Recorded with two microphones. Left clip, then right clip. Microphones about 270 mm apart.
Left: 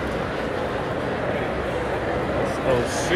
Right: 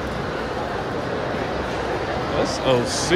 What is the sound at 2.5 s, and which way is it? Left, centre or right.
Speech, centre.